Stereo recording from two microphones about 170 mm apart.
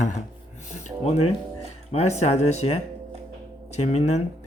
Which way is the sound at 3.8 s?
40° left (ahead or behind).